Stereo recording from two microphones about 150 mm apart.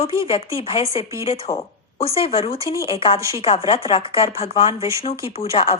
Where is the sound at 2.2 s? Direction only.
40° left (ahead or behind).